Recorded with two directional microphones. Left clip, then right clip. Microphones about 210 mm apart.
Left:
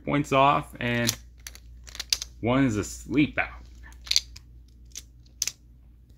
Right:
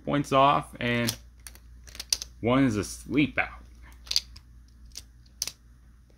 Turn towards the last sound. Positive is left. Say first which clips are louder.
# left 3 dB
turn(degrees=-20)  # may be behind; listen again after turning